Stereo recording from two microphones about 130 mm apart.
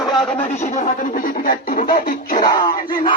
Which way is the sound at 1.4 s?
90° left.